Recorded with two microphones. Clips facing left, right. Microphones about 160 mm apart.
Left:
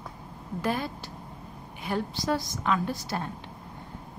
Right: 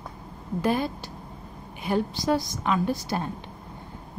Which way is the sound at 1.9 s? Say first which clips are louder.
Right 4 dB; 20° right (ahead or behind).